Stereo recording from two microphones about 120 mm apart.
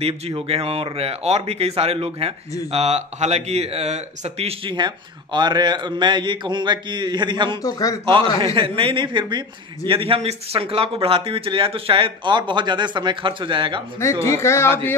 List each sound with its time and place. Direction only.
0.0 s speech: 55° right (ahead or behind)
4.7 s a man's voice: 40° right (ahead or behind)
7.6 s speech: 30° left (ahead or behind)
8.0 s speech: 45° right (ahead or behind)
14.2 s speech: 20° left (ahead or behind)